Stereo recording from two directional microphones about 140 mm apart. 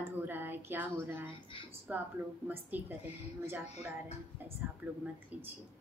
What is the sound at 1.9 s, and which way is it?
A woman's voice, 10° right (ahead or behind).